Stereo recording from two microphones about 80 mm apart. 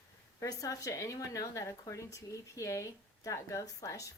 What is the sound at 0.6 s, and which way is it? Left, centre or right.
A woman's voice, left.